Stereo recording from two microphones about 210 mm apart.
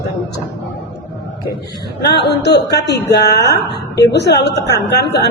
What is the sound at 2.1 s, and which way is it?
A woman's voice, 50° left (ahead or behind).